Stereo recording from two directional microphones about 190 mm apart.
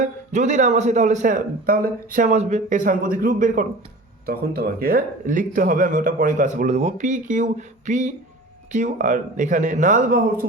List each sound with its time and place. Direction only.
0.0 s a man's voice: 40° right (ahead or behind)